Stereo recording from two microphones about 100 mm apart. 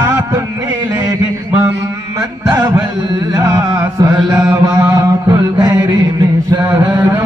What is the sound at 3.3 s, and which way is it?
Chant, 40° right (ahead or behind).